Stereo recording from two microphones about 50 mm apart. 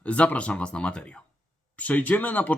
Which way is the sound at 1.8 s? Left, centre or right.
Left.